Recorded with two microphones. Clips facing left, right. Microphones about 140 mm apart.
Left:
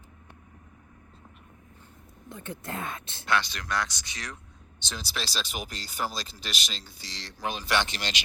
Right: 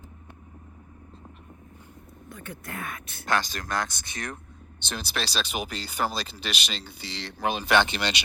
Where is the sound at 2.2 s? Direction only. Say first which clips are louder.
Left 2 dB; 25° left (ahead or behind).